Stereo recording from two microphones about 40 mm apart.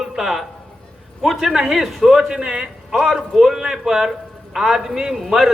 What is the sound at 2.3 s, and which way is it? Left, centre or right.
Speech, centre.